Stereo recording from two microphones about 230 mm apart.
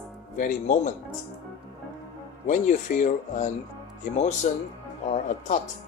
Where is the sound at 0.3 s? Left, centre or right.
Left.